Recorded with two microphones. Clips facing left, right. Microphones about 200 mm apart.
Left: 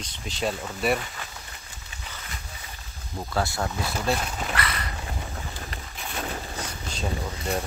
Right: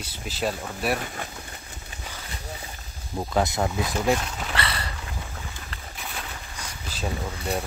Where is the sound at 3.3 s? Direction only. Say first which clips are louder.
Right 3 dB; 20° right (ahead or behind).